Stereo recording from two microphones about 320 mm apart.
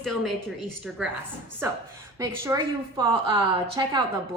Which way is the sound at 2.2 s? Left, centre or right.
Centre.